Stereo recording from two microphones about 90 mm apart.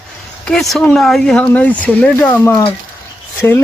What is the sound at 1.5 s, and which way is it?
Speech, 15° left (ahead or behind).